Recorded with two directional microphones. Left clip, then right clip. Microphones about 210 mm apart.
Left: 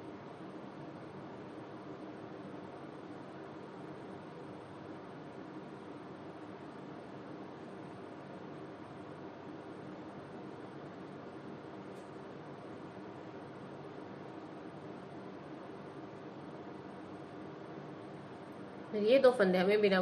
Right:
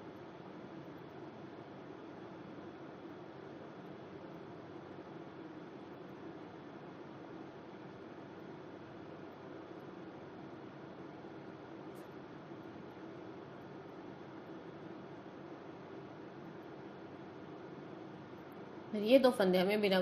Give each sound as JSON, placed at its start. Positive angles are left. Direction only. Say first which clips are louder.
{"t": 19.0, "sound": "a woman's voice", "louder": "left 2 dB", "side_deg": -40}